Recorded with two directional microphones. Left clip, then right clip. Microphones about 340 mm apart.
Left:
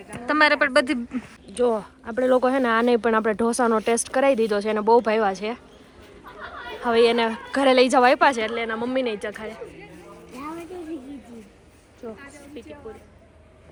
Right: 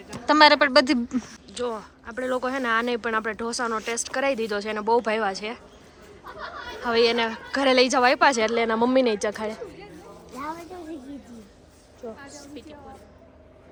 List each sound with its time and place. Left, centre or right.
0.1 s speech: centre
7.0 s speech: right
7.3 s speech: centre
8.4 s speech: centre
12.3 s a sound: centre